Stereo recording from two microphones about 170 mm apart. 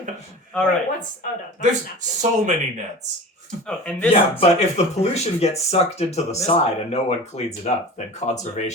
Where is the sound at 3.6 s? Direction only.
10° left (ahead or behind).